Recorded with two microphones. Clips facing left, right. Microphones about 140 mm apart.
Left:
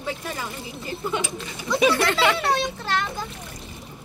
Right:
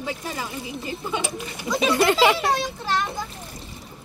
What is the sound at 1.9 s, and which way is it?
Speech, 20° right (ahead or behind).